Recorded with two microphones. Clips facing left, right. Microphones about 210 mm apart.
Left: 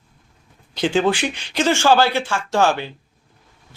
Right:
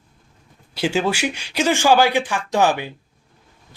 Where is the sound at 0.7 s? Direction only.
5° right (ahead or behind).